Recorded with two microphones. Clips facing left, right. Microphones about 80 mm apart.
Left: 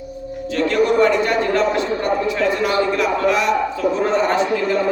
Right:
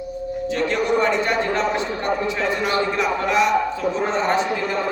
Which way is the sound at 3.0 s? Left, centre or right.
Right.